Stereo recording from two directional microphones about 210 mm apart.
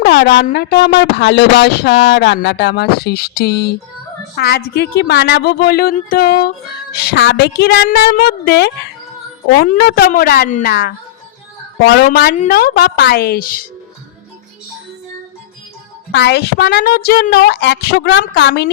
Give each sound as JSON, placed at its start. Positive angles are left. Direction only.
{"t": 0.0, "sound": "a sound", "side_deg": 55}
{"t": 0.5, "sound": "speech", "side_deg": 50}
{"t": 11.9, "sound": "speech", "side_deg": 45}
{"t": 16.1, "sound": "speech", "side_deg": 55}